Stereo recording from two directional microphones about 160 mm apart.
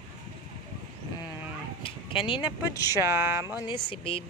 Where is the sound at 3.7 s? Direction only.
35° left (ahead or behind).